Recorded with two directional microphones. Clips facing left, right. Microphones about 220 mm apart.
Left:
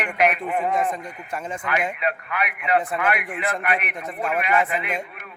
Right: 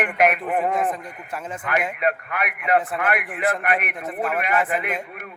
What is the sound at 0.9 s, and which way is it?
Speech, 5° right (ahead or behind).